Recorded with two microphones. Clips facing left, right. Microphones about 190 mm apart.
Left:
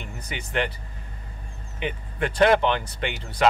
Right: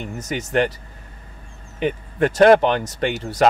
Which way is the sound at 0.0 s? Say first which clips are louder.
Right 9 dB; 40° right (ahead or behind).